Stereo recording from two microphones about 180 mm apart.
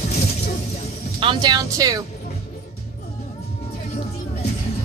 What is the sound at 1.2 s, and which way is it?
Speech, 25° right (ahead or behind).